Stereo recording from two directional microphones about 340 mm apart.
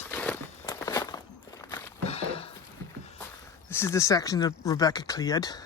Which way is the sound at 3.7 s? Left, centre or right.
Centre.